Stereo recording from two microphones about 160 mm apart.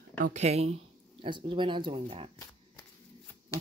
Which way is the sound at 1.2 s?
30° right (ahead or behind).